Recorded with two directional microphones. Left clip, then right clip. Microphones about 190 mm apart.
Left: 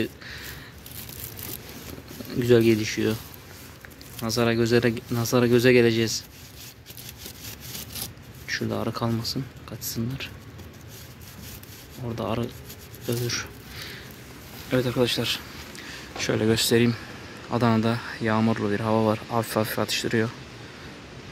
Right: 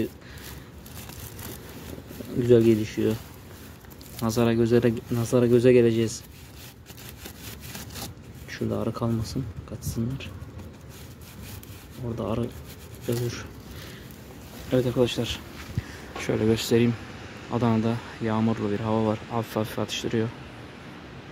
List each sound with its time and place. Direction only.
2.4 s speech: 10° right (ahead or behind)
4.2 s speech: 20° right (ahead or behind)
8.5 s speech: 10° right (ahead or behind)
12.2 s speech: 10° right (ahead or behind)
14.7 s speech: 10° right (ahead or behind)